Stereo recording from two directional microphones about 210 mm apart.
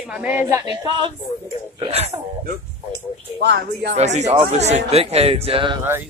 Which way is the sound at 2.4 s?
55° right (ahead or behind).